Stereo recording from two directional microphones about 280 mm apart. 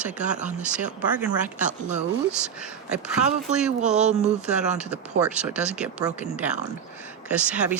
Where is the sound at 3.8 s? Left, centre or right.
Right.